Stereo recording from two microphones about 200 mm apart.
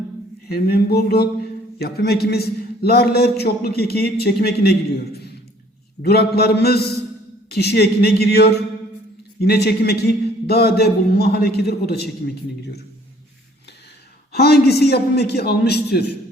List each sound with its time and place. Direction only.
0.4 s a man's voice: 50° left (ahead or behind)
14.3 s a man's voice: 50° left (ahead or behind)